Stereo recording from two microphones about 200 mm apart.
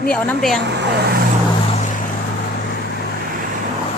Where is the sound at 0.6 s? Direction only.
60° right (ahead or behind).